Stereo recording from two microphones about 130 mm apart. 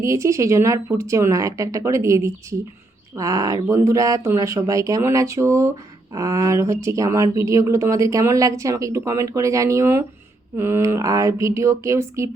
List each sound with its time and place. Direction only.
0.0 s speech: 25° right (ahead or behind)